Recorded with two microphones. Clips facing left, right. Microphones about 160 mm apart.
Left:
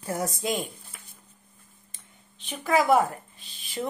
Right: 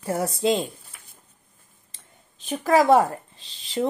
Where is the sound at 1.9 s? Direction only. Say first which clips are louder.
Right 5 dB; 40° right (ahead or behind).